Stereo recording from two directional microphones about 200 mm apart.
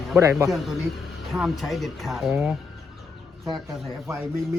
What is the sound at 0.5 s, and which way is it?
Speech, centre (ahead or behind).